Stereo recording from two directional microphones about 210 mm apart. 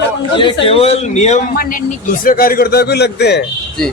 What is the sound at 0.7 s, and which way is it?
Speech, 30° left (ahead or behind).